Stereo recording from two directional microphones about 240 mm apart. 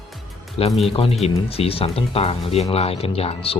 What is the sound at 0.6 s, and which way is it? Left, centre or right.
Speech, left.